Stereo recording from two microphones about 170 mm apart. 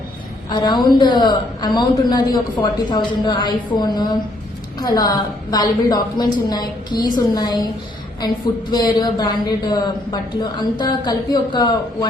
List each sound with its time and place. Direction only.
0.5 s a woman's voice: 25° left (ahead or behind)
8.7 s a woman's voice: 25° left (ahead or behind)